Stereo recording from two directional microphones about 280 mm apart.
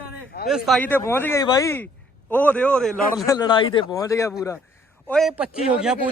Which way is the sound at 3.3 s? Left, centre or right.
Centre.